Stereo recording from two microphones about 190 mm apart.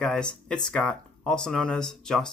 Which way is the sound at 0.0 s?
5° left (ahead or behind).